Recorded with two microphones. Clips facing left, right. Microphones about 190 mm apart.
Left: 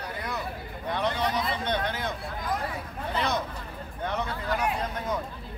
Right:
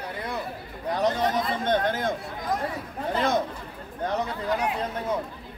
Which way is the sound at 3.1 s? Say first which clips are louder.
Right 4 dB; 50° right (ahead or behind).